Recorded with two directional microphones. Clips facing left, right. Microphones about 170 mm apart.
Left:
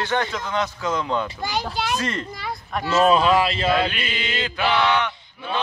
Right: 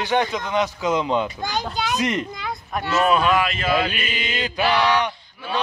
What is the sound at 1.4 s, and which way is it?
Speech, 5° left (ahead or behind).